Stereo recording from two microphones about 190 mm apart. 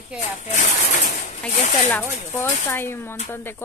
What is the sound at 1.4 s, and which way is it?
Speech, 5° left (ahead or behind).